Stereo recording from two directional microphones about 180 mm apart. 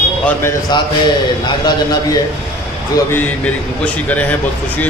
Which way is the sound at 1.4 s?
25° left (ahead or behind).